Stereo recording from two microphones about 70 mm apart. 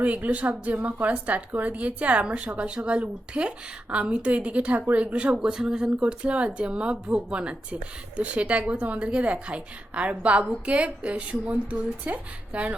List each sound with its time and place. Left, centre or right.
0.0 s a woman's voice: right